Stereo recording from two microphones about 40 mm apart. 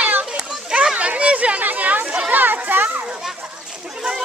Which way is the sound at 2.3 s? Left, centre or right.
Right.